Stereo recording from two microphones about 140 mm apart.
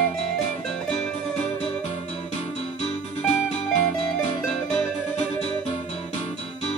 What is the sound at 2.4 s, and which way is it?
Music, 55° left (ahead or behind).